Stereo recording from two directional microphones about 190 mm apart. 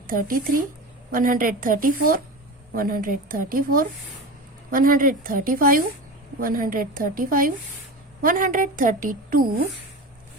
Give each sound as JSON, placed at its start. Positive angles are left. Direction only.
{"t": 0.1, "sound": "a woman's voice", "side_deg": -50}